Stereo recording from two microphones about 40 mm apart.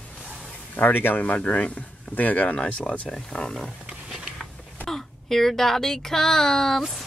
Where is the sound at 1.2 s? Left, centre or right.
Left.